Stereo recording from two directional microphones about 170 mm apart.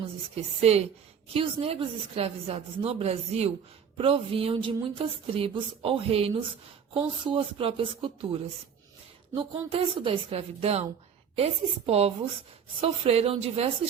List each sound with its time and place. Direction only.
0.3 s a woman's voice: 40° right (ahead or behind)